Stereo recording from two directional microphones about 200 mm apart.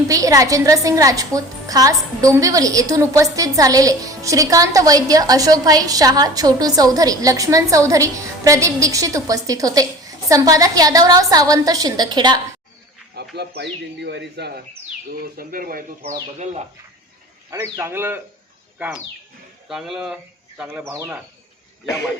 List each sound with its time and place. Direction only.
0.1 s a woman's voice: 15° right (ahead or behind)
13.1 s a man's voice: 55° right (ahead or behind); by 16.6 s 35° right (ahead or behind)
17.5 s a woman's voice: 10° right (ahead or behind)